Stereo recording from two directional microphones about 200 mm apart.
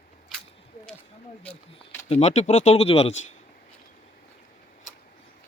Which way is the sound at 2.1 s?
35° left (ahead or behind).